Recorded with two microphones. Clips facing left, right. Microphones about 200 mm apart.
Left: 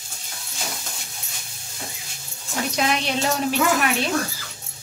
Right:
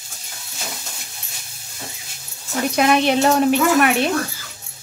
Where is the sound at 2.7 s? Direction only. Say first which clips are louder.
Right 8 dB; 55° right (ahead or behind).